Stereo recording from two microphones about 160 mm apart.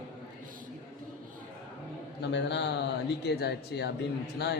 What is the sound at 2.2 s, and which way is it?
A man's voice, 90° left.